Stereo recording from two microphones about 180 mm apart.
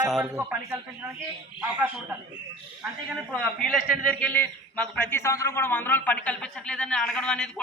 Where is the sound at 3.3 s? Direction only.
Centre (ahead or behind).